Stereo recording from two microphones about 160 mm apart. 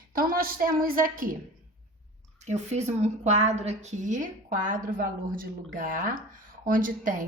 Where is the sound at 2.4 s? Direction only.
45° right (ahead or behind).